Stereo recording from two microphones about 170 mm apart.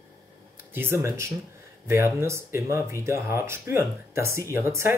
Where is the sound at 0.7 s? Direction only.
15° right (ahead or behind).